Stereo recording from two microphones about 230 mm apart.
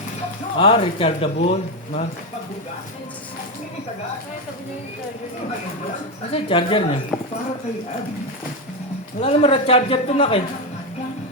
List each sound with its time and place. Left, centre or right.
0.6 s speech: left
6.3 s speech: left
9.2 s speech: left